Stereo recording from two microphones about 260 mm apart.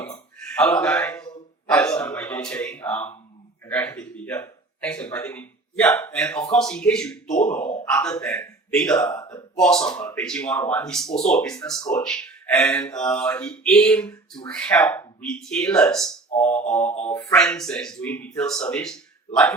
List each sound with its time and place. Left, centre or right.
0.0 s a sound: centre
1.6 s gasp: centre
3.7 s speech: centre
7.3 s speech: left
7.9 s speech: centre
16.8 s speech: left
17.2 s speech: centre